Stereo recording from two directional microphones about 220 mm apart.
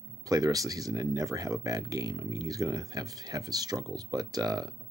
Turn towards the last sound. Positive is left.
turn(degrees=-15)  # may be behind; listen again after turning